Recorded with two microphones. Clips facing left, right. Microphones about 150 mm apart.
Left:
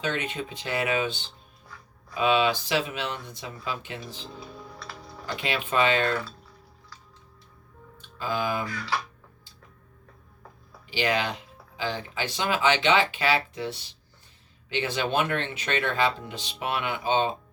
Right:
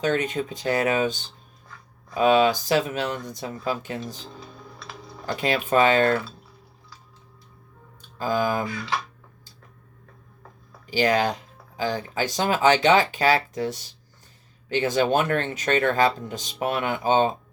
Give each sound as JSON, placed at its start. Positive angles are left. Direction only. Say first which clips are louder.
{"t": 0.0, "sound": "speech", "louder": "right 6 dB", "side_deg": -45}
{"t": 4.8, "sound": "typing", "louder": "right 1 dB", "side_deg": -10}
{"t": 5.4, "sound": "speech", "louder": "right 5 dB", "side_deg": -40}
{"t": 8.2, "sound": "speech", "louder": "right 5 dB", "side_deg": -40}
{"t": 8.6, "sound": "speech", "louder": "right 2 dB", "side_deg": -15}
{"t": 10.8, "sound": "speech", "louder": "right 5 dB", "side_deg": -40}